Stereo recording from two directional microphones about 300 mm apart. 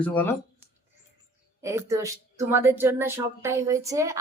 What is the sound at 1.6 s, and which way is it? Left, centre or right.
Speech, centre.